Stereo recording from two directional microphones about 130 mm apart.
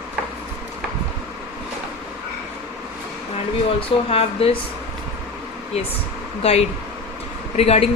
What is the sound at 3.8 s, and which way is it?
Speech, 45° left (ahead or behind).